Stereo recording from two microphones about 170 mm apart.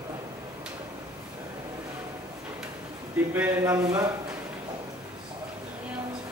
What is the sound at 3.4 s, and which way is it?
Speech, 15° right (ahead or behind).